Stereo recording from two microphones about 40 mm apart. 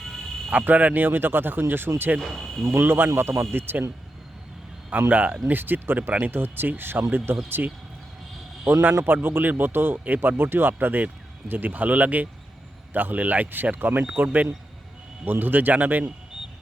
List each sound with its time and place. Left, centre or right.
0.6 s speech: right
2.2 s speech: centre
2.6 s a man's voice: right
4.9 s speech: right
5.5 s speech: right
7.6 s speech: right
8.6 s speech: right
15.2 s speech: right